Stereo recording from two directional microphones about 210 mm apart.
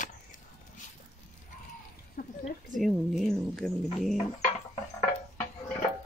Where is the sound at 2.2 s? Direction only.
40° left (ahead or behind).